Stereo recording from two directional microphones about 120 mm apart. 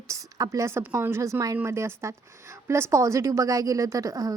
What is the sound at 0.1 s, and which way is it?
A woman's voice, 30° right (ahead or behind).